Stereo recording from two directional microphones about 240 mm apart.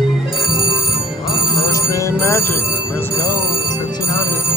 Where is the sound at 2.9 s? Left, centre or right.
Centre.